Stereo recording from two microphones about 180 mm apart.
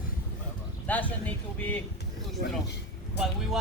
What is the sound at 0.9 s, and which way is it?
Speech, 10° left (ahead or behind).